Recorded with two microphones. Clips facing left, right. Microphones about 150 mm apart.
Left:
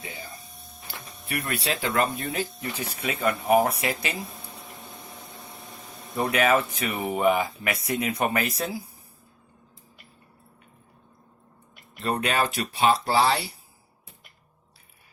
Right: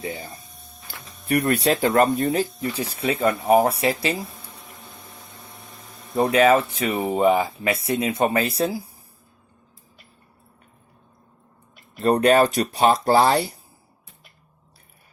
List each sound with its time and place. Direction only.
0.0 s speech: 45° right (ahead or behind)
1.3 s speech: 45° right (ahead or behind)
6.1 s speech: 30° right (ahead or behind)
11.9 s speech: 45° right (ahead or behind)